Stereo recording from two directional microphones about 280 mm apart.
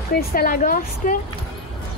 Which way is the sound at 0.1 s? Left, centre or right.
Left.